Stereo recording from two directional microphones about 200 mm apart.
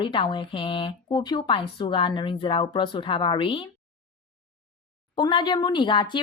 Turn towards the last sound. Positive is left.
turn(degrees=25)  # may be behind; listen again after turning